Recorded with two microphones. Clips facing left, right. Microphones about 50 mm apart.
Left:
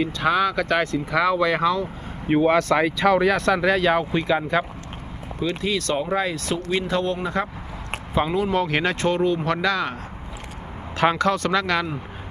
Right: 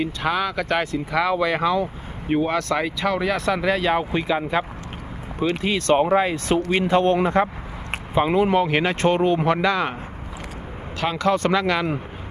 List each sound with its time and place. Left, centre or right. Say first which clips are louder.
0.0 s speech: left 2 dB; centre
2.3 s speech: left 3 dB; centre
5.4 s speech: right 2 dB; right
7.9 s a sound: right 2 dB; centre
8.5 s speech: right 2 dB; centre
9.0 s speech: right 2 dB; right
9.5 s speech: right 2 dB; centre
11.0 s speech: left 5 dB; left
11.5 s speech: right 1 dB; centre